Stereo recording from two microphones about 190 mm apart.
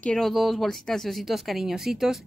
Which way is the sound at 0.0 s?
5° left (ahead or behind).